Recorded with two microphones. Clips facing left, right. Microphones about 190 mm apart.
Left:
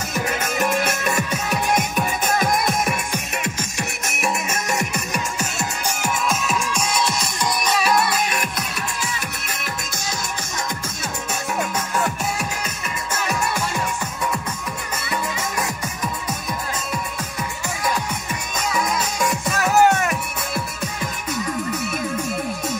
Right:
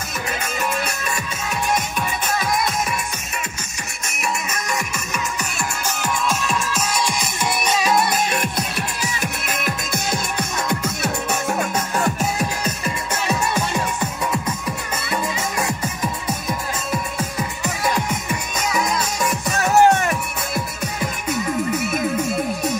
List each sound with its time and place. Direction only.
0.6 s music: 50° left (ahead or behind)
4.2 s music: 45° left (ahead or behind)
5.4 s music: 15° left (ahead or behind)
7.6 s music: 20° right (ahead or behind)
8.4 s music: 30° right (ahead or behind)
9.5 s music: 60° right (ahead or behind)
11.4 s music: 40° right (ahead or behind)
19.6 s music: 30° right (ahead or behind)